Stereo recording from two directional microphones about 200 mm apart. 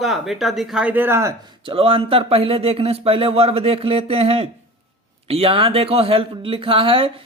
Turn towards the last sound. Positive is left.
turn(degrees=-25)  # may be behind; listen again after turning